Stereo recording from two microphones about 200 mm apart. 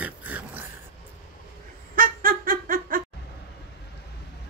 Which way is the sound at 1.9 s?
45° right (ahead or behind).